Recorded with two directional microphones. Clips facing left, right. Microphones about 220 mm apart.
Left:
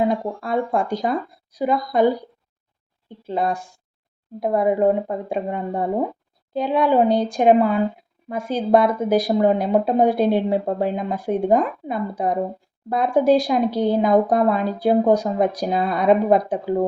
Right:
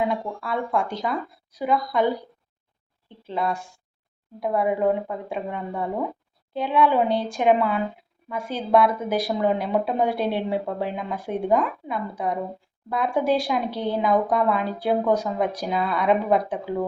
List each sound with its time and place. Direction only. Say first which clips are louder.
0.0 s a woman's voice: left 5 dB; 40° left (ahead or behind)
3.2 s a woman's voice: left 4 dB; 40° left (ahead or behind)